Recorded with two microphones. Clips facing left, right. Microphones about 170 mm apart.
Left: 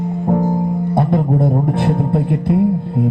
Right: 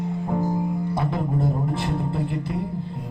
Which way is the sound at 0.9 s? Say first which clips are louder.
Left 9 dB; 55° left (ahead or behind).